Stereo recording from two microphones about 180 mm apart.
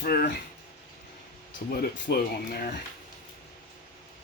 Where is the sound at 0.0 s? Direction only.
55° left (ahead or behind).